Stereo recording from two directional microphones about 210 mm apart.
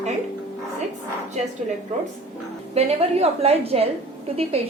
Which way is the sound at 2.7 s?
30° right (ahead or behind).